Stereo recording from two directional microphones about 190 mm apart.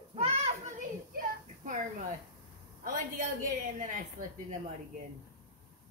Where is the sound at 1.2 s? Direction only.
45° right (ahead or behind).